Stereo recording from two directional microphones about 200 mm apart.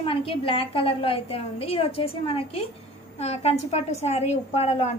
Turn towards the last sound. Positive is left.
turn(degrees=30)  # may be behind; listen again after turning